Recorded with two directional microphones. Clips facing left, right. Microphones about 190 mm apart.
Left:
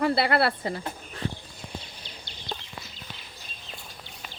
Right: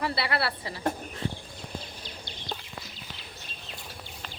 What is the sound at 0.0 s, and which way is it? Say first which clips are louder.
Speech: left 6 dB; 50° left (ahead or behind).